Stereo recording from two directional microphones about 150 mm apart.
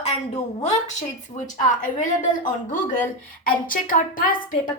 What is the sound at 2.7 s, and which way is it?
A woman's voice, 60° left (ahead or behind).